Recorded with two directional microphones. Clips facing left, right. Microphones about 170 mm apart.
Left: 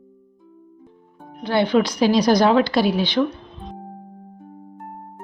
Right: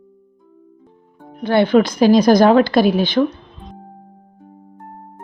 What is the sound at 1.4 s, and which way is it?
A woman's voice, 50° right (ahead or behind).